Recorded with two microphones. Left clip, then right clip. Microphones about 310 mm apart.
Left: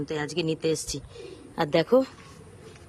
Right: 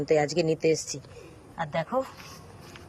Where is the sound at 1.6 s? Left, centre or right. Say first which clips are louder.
Left 7 dB; centre.